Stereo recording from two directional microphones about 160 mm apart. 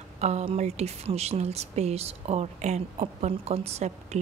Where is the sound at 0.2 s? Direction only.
45° right (ahead or behind).